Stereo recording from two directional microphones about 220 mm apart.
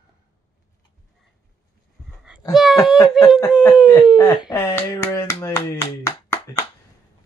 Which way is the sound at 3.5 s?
5° right (ahead or behind).